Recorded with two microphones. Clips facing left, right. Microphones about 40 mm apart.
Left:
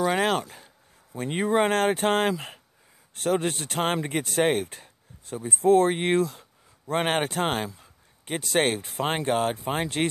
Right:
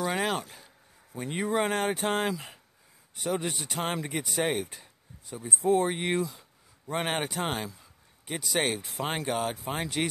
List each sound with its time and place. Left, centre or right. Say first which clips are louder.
0.0 s a sound: left 5 dB; left
1.2 s speech: left 5 dB; left
1.7 s speech: left 5 dB; left
5.9 s speech: left 5 dB; left